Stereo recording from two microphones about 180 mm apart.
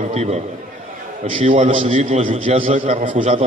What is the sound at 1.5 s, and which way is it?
A man's voice, 30° right (ahead or behind).